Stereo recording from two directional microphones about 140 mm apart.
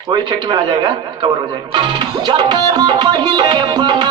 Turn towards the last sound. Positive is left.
turn(degrees=-35)  # may be behind; listen again after turning